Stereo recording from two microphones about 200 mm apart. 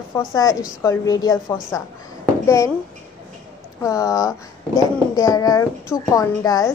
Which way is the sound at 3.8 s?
15° left (ahead or behind).